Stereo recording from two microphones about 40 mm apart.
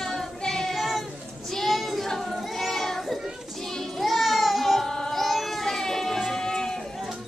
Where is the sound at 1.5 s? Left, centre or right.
Centre.